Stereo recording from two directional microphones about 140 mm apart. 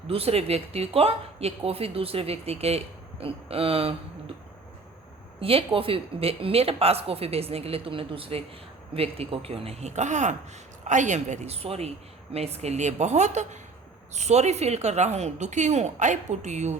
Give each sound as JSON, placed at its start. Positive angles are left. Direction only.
{"t": 0.1, "sound": "a woman's voice", "side_deg": -45}
{"t": 5.4, "sound": "a woman's voice", "side_deg": -40}